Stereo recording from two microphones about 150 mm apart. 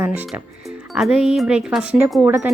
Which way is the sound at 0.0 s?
10° right (ahead or behind).